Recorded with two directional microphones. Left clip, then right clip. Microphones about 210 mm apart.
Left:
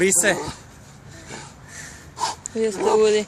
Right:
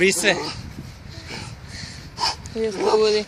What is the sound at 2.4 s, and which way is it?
Dog, 20° left (ahead or behind).